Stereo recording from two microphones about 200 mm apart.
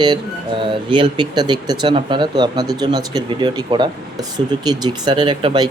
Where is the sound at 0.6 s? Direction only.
25° right (ahead or behind).